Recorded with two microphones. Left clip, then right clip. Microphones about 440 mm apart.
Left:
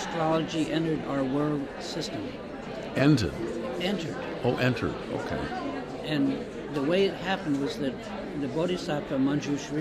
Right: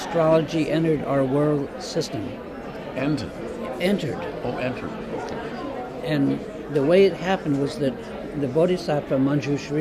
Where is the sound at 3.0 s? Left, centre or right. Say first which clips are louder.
Left 2 dB; left.